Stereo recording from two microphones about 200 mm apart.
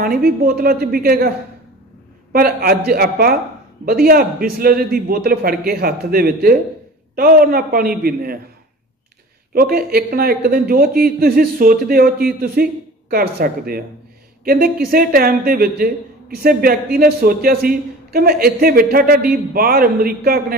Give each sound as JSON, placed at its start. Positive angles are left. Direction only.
{"t": 0.0, "sound": "a man's voice", "side_deg": -45}
{"t": 2.3, "sound": "a man's voice", "side_deg": -45}
{"t": 9.5, "sound": "a man's voice", "side_deg": -45}